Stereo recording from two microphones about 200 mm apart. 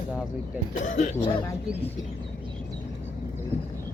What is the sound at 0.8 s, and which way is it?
Speech, 35° left (ahead or behind).